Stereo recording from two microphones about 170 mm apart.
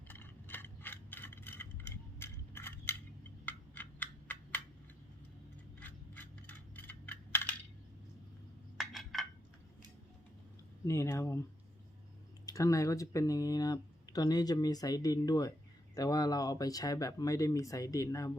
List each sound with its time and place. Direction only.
0.1 s mechanisms: 10° left (ahead or behind)
2.1 s a sound: 15° left (ahead or behind)
3.4 s computer keyboard: 10° left (ahead or behind)
5.8 s coin: 10° left (ahead or behind)
8.8 s a sound: centre (ahead or behind)
10.8 s speech: 15° left (ahead or behind)
12.5 s speech: 20° left (ahead or behind)